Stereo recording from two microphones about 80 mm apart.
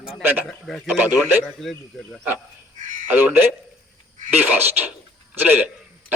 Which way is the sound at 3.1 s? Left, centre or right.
Right.